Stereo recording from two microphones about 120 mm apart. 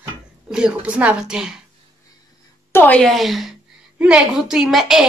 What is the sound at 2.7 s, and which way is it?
Speech, 15° left (ahead or behind).